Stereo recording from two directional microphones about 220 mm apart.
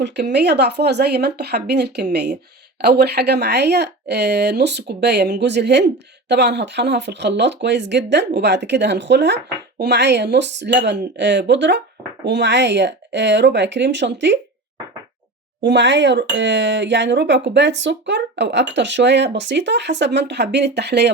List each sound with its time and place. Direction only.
0.0 s speech: 50° right (ahead or behind)
15.6 s speech: 55° right (ahead or behind)